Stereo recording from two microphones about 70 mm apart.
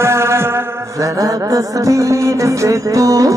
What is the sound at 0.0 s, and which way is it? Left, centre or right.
Mantra, right.